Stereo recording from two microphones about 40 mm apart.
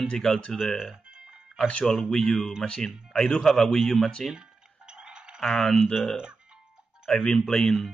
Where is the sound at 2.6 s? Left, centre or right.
Centre.